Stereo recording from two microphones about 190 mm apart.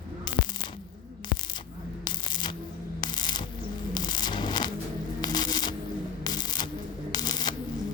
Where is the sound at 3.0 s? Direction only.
20° left (ahead or behind).